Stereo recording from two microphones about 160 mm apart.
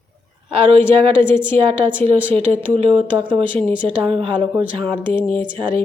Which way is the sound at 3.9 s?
35° right (ahead or behind).